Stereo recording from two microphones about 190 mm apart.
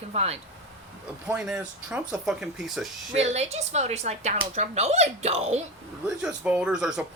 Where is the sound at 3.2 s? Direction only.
35° right (ahead or behind).